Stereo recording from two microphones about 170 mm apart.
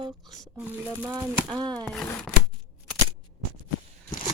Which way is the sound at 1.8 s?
5° left (ahead or behind).